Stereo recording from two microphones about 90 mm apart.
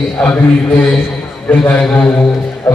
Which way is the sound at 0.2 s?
15° left (ahead or behind).